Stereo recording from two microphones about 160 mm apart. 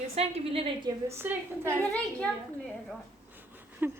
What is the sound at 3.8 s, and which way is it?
Speech, 10° right (ahead or behind).